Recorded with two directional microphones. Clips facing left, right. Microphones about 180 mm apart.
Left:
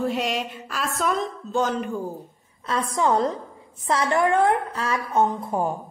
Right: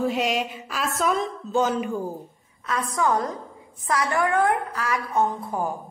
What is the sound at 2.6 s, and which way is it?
A woman's voice, 30° left (ahead or behind).